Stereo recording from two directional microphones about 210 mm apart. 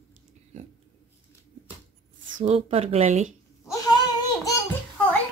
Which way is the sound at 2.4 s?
30° right (ahead or behind).